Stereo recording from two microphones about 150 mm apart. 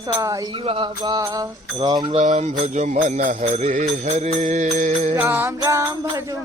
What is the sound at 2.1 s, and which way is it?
Music, 50° right (ahead or behind).